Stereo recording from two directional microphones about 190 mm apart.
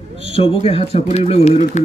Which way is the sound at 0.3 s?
30° left (ahead or behind).